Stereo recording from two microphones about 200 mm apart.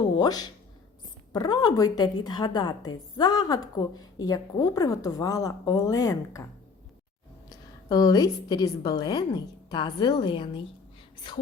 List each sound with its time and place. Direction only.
0.2 s a woman's voice: 20° left (ahead or behind)
7.9 s a woman's voice: 20° left (ahead or behind)